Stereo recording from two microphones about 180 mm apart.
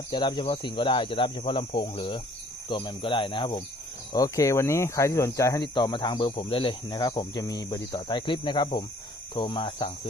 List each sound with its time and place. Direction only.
0.1 s speech: 25° left (ahead or behind)